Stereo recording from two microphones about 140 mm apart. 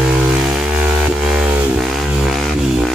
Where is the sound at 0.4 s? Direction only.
5° right (ahead or behind).